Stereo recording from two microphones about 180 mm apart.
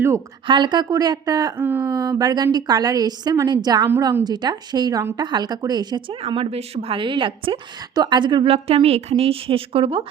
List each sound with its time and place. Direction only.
0.4 s speech: 25° right (ahead or behind)